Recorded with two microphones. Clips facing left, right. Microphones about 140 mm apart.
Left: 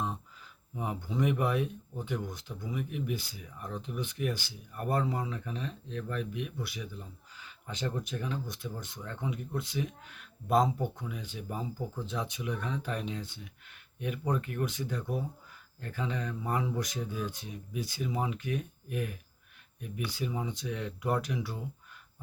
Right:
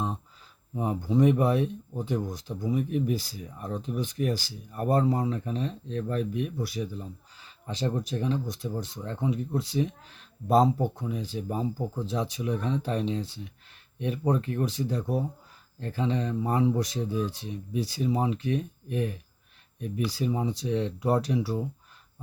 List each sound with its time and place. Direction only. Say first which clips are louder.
0.8 s speech: right 8 dB; 35° right (ahead or behind)